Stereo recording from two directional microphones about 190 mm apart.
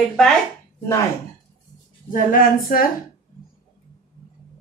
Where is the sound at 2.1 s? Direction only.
50° left (ahead or behind).